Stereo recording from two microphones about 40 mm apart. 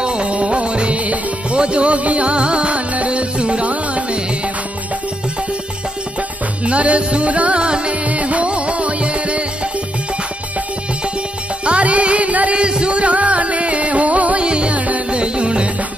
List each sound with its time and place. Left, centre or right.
0.0 s music: right
6.6 s music: right
8.1 s music: right
11.6 s music: right
12.5 s music: right